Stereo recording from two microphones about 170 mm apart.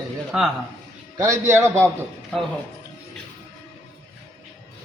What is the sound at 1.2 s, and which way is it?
Speech, 15° right (ahead or behind).